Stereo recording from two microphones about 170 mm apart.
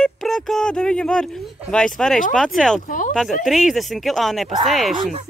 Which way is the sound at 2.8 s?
50° left (ahead or behind).